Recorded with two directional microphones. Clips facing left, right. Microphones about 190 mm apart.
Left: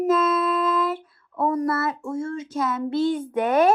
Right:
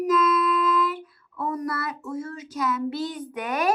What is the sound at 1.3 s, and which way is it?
Speech, 45° left (ahead or behind).